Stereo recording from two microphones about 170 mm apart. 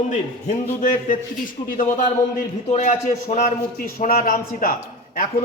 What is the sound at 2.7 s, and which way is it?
A man's voice, 45° left (ahead or behind).